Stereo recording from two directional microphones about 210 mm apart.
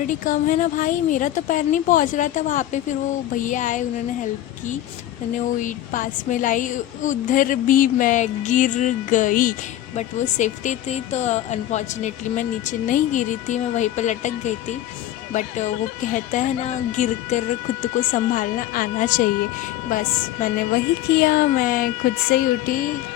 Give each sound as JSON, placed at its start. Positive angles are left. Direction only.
{"t": 0.1, "sound": "a woman's voice", "side_deg": 40}
{"t": 5.5, "sound": "a woman's voice", "side_deg": 40}